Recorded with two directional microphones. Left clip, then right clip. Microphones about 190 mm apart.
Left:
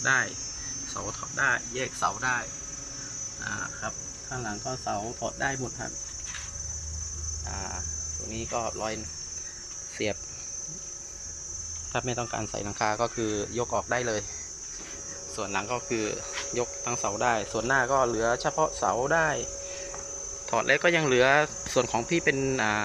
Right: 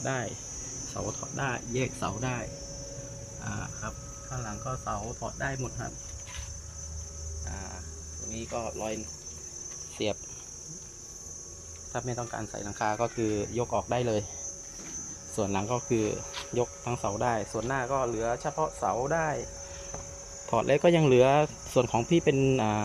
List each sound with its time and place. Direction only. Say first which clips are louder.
0.0 s cricket: left 8 dB; 5° right (ahead or behind)
4.4 s speech: left 2 dB; 5° left (ahead or behind)
8.4 s speech: left 3 dB; centre (ahead or behind)
10.0 s speech: left 1 dB; centre (ahead or behind)
11.9 s speech: left 4 dB; 5° left (ahead or behind); by 14.3 s 15° right (ahead or behind)
15.4 s cricket: even; 20° right (ahead or behind)
17.6 s speech: left 5 dB; 5° left (ahead or behind)
20.5 s cricket: even; 15° right (ahead or behind)